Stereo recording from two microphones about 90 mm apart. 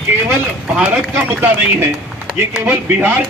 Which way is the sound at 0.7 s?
15° right (ahead or behind).